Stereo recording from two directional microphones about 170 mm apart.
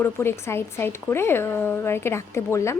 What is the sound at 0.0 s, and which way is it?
A woman's voice, 15° left (ahead or behind).